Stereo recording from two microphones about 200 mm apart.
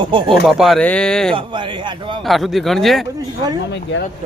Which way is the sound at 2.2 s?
Centre (ahead or behind).